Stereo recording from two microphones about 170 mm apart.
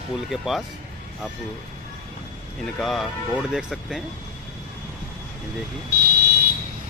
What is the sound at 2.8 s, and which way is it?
Speech, centre (ahead or behind).